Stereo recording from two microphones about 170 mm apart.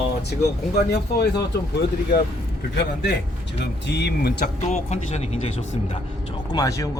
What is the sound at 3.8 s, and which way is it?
Speech, 80° left.